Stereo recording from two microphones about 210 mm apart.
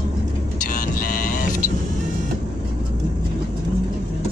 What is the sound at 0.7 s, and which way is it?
Vehicle, 40° left (ahead or behind).